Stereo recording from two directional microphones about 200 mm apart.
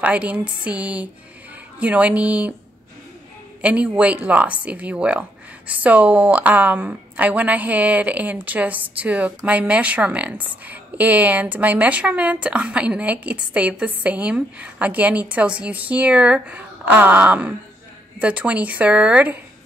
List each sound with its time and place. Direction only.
0.0 s a woman's voice: 5° right (ahead or behind)
3.6 s a woman's voice: 5° right (ahead or behind)